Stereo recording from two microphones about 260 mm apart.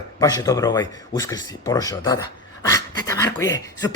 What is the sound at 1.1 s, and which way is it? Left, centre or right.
Speech, centre.